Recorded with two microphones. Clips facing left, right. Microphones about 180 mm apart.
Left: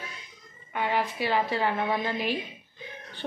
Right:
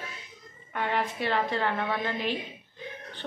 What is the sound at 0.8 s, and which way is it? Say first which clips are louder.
A woman's voice: left 1 dB; 5° left (ahead or behind).